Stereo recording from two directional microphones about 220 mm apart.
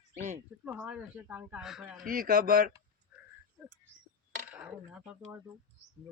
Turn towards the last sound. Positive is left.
turn(degrees=-10)  # may be behind; listen again after turning